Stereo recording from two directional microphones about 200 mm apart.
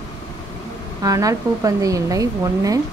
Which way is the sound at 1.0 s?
15° right (ahead or behind).